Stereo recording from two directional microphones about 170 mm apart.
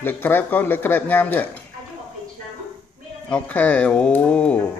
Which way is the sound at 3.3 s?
10° left (ahead or behind).